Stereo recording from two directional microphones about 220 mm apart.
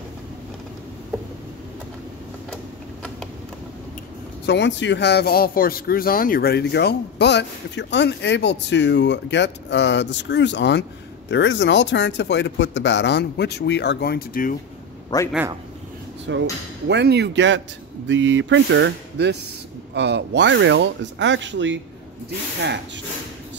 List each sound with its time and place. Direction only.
4.5 s speech: 55° left (ahead or behind)
15.1 s a man's voice: 20° left (ahead or behind)
16.3 s speech: 55° right (ahead or behind)